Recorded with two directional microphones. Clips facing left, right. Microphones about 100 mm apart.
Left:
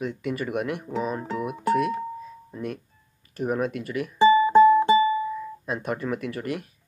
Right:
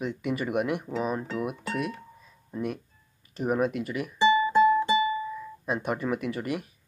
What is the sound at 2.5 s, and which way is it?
Speech, 10° right (ahead or behind).